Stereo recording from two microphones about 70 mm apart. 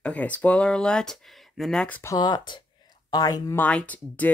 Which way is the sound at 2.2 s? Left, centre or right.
Left.